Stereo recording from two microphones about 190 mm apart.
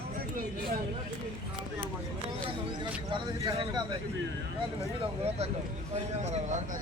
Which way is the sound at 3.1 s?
25° right (ahead or behind).